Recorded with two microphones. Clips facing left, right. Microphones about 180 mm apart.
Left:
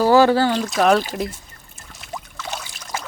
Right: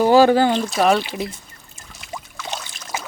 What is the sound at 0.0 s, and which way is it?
Speech, 20° right (ahead or behind).